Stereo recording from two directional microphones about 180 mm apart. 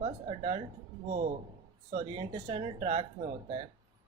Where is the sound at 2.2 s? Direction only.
30° right (ahead or behind).